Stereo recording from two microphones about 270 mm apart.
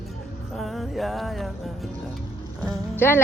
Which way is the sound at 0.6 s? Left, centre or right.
Centre.